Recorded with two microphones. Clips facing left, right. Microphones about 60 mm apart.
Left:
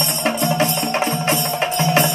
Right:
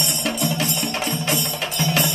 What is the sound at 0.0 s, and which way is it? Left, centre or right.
Music, left.